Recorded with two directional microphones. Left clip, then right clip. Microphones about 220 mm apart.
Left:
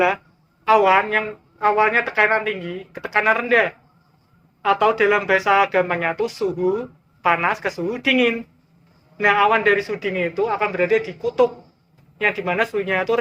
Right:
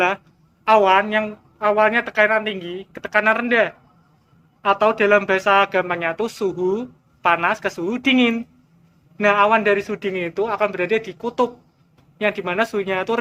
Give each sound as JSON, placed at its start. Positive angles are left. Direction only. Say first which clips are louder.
{"t": 0.6, "sound": "speech", "louder": "right 1 dB", "side_deg": -45}